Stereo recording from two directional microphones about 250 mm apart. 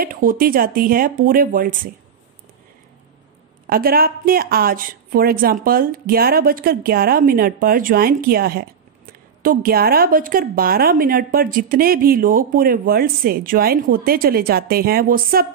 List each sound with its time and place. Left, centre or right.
0.0 s a woman's voice: right
3.6 s a woman's voice: right